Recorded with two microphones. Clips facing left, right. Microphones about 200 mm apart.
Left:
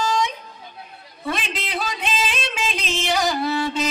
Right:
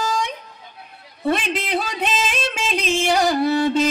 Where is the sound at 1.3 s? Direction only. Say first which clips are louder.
Right 6 dB; 55° right (ahead or behind).